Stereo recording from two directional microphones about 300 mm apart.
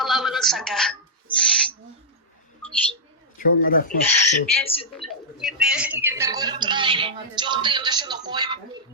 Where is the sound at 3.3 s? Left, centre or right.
Left.